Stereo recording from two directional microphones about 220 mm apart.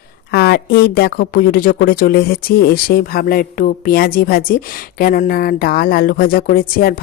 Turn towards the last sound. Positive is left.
turn(degrees=40)  # may be behind; listen again after turning